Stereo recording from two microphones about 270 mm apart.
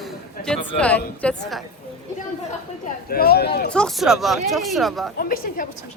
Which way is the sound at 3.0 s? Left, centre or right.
Left.